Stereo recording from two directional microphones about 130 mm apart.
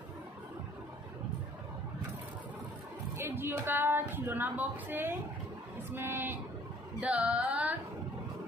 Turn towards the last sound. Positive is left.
turn(degrees=-10)  # may be behind; listen again after turning